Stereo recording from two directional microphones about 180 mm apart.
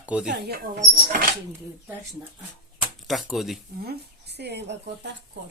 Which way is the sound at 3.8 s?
65° right (ahead or behind).